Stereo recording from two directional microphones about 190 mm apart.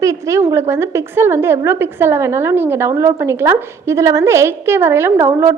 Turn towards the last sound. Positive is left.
turn(degrees=-15)  # may be behind; listen again after turning